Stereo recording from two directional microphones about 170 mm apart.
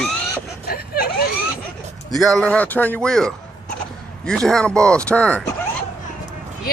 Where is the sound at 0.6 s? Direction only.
65° left (ahead or behind).